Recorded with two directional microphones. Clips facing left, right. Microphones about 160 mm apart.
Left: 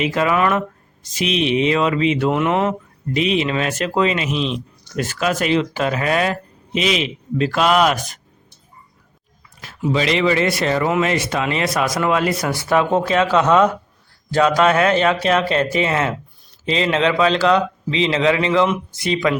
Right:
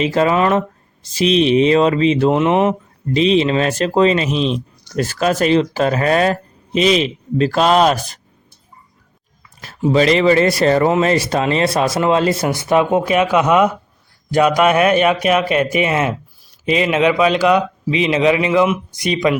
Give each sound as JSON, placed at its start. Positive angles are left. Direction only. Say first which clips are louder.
{"t": 0.0, "sound": "speech", "louder": "right 3 dB", "side_deg": -35}
{"t": 9.6, "sound": "speech", "louder": "right 6 dB", "side_deg": -40}